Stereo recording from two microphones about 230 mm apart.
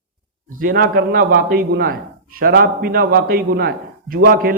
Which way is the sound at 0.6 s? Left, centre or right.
Right.